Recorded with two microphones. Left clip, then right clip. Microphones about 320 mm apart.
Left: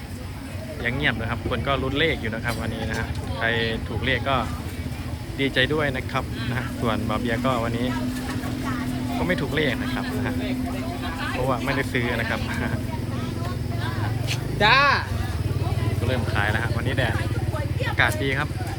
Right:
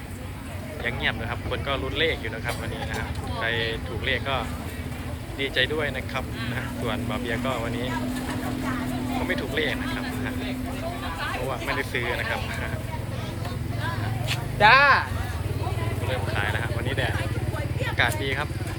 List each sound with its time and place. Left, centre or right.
0.9 s speech: centre
9.2 s speech: centre
11.5 s speech: centre
14.6 s speech: right
16.3 s speech: centre